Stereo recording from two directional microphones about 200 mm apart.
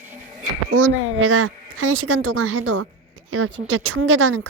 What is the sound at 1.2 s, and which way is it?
A woman's voice, 85° right.